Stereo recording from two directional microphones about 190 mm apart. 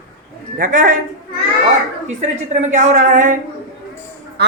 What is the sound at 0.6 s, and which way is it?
Speech, 45° right (ahead or behind).